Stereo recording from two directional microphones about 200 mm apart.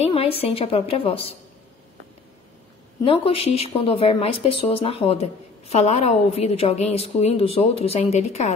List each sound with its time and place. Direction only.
0.0 s a woman's voice: 30° left (ahead or behind)
3.1 s a woman's voice: 30° left (ahead or behind)